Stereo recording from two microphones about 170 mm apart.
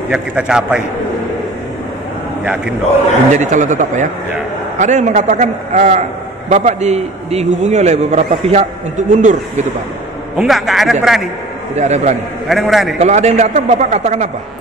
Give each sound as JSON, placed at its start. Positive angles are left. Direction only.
{"t": 0.1, "sound": "a man's voice", "side_deg": -5}
{"t": 2.4, "sound": "a man's voice", "side_deg": -5}
{"t": 3.3, "sound": "a man's voice", "side_deg": -45}
{"t": 10.3, "sound": "a man's voice", "side_deg": 0}
{"t": 11.7, "sound": "a man's voice", "side_deg": -40}
{"t": 12.4, "sound": "a man's voice", "side_deg": 0}
{"t": 13.0, "sound": "a man's voice", "side_deg": -40}